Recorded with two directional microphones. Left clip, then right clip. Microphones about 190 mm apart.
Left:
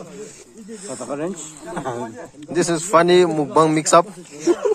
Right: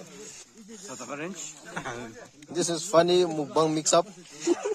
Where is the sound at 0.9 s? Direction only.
15° right (ahead or behind).